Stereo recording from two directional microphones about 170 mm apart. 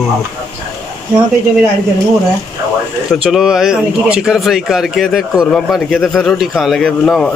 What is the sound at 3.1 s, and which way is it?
A man's voice, centre (ahead or behind).